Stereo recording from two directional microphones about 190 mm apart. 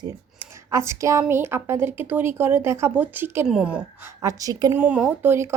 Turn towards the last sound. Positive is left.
turn(degrees=-15)  # may be behind; listen again after turning